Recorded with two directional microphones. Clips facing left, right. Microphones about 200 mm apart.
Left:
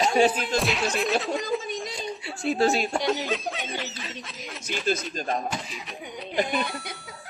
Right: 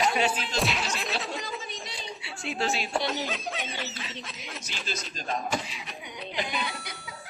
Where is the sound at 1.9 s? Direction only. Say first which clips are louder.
Left 6 dB; 45° left (ahead or behind).